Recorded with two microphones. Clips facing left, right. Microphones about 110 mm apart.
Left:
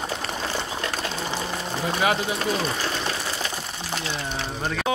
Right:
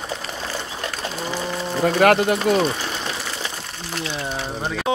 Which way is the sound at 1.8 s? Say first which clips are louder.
Right 8 dB; 60° right (ahead or behind).